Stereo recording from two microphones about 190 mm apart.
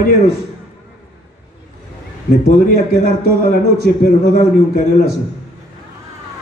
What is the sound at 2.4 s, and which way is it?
A man's voice, 50° left (ahead or behind).